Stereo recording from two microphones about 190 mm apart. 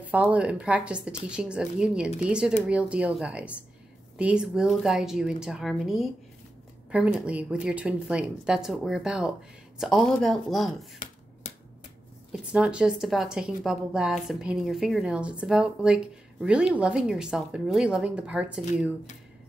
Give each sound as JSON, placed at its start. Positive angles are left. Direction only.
{"t": 0.0, "sound": "a woman's voice", "side_deg": -10}
{"t": 12.3, "sound": "a woman's voice", "side_deg": -5}